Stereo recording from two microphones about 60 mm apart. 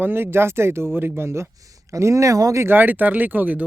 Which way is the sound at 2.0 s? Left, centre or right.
Right.